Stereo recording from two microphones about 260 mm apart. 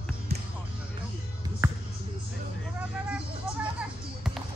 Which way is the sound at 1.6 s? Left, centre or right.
Centre.